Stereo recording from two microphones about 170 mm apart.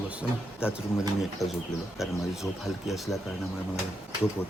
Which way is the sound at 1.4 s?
20° left (ahead or behind).